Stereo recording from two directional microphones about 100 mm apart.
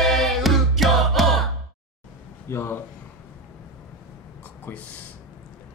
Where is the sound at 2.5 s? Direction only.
25° left (ahead or behind).